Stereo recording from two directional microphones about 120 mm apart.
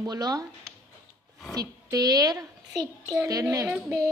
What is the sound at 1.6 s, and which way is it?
A child's voice, 30° right (ahead or behind).